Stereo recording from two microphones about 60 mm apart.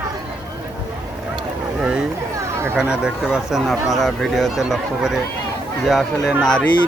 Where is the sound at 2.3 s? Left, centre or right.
Right.